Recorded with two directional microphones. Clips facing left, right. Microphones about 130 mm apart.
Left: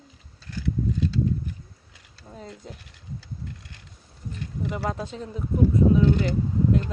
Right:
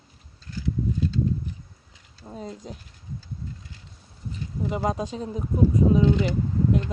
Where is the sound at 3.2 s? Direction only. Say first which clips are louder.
Right 1 dB; 70° left (ahead or behind).